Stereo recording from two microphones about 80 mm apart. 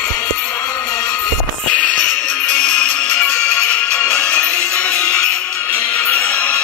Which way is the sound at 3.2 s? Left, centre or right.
Centre.